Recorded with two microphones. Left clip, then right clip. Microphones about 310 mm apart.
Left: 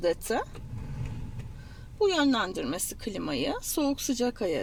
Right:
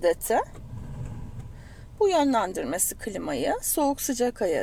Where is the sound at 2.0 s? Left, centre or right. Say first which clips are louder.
Right 3 dB; right.